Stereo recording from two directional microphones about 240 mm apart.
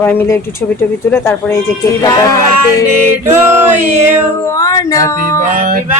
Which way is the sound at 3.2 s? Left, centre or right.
Centre.